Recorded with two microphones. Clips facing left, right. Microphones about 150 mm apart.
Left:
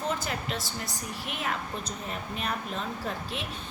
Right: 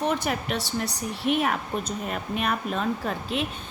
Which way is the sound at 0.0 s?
70° right (ahead or behind).